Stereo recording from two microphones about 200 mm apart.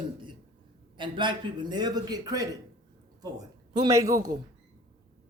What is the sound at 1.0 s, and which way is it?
A man's voice, 25° right (ahead or behind).